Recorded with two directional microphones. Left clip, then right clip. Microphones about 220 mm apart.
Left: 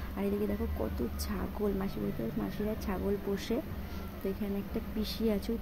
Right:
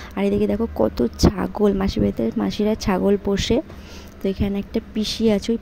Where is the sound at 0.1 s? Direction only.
35° right (ahead or behind).